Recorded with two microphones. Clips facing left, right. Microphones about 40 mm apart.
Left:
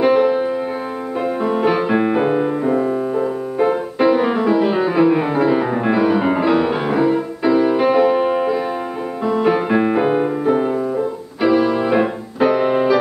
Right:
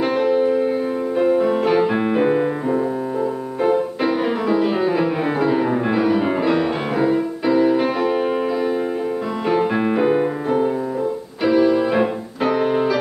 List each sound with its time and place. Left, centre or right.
0.0 s music: centre
2.7 s music: centre
3.6 s music: centre